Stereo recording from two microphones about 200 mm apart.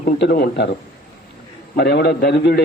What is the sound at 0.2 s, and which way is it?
Speech, 55° left (ahead or behind).